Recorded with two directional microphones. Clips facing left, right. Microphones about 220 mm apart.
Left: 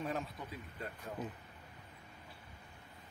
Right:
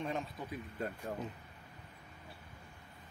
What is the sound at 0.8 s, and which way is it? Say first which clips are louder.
Speech: right 6 dB; 45° right (ahead or behind).